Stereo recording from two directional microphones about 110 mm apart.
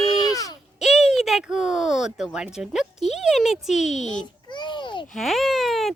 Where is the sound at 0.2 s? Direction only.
35° left (ahead or behind).